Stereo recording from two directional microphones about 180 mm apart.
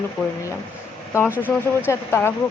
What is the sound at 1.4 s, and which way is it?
Speech, 10° left (ahead or behind).